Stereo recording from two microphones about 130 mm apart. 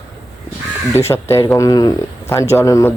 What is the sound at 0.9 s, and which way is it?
Speech, 20° left (ahead or behind).